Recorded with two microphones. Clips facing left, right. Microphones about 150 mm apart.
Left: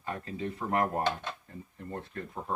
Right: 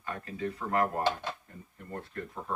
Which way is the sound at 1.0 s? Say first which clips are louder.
Right 1 dB; 5° right (ahead or behind).